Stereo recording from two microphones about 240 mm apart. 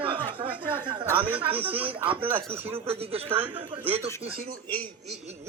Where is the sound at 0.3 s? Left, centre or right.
Right.